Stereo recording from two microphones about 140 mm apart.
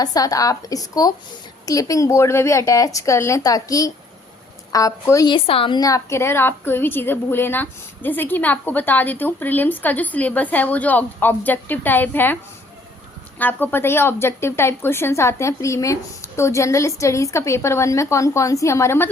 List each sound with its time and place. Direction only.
0.0 s a woman's voice: 25° left (ahead or behind)
5.3 s a woman's voice: 40° left (ahead or behind)
5.8 s a woman's voice: 20° left (ahead or behind)
13.4 s a woman's voice: 15° left (ahead or behind)